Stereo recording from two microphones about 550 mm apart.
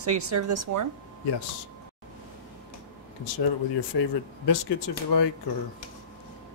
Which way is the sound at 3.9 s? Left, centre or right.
Left.